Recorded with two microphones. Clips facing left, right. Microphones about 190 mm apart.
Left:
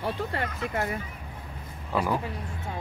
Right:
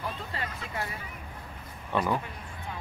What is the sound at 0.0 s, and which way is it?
Speech, 60° left (ahead or behind).